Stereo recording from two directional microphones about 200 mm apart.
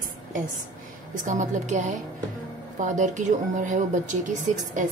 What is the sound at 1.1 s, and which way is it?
Speech, 40° right (ahead or behind).